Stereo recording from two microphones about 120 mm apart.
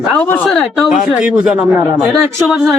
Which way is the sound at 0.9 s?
5° right (ahead or behind).